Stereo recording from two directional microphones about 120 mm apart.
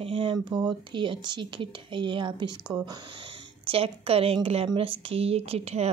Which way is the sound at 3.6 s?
55° right (ahead or behind).